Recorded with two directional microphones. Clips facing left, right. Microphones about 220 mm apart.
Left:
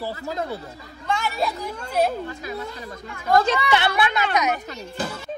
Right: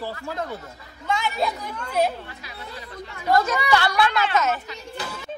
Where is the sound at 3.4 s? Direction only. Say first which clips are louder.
Left 1 dB; 25° left (ahead or behind).